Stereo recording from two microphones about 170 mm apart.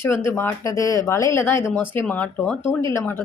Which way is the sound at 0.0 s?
15° left (ahead or behind).